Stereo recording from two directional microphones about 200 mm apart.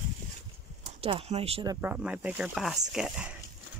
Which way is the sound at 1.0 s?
30° right (ahead or behind).